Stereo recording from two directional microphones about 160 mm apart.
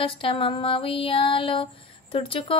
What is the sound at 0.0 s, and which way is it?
Speech, 35° left (ahead or behind).